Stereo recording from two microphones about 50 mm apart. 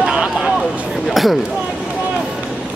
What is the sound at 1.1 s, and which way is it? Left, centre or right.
Speech, centre.